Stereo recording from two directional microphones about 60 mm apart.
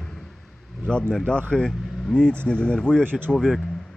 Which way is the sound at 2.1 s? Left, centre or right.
Centre.